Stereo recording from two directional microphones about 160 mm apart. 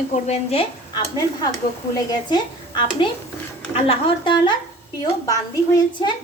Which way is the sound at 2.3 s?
30° left (ahead or behind).